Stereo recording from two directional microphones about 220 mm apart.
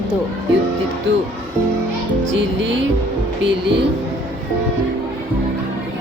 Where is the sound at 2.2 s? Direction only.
55° right (ahead or behind).